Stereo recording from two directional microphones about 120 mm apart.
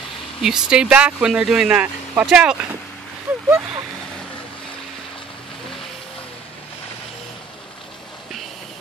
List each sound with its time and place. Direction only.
0.4 s speech: 5° right (ahead or behind)